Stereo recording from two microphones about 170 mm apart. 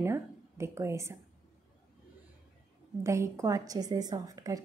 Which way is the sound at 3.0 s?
15° right (ahead or behind).